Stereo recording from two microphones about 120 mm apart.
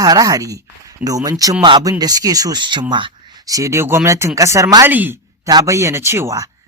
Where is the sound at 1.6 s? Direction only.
40° right (ahead or behind).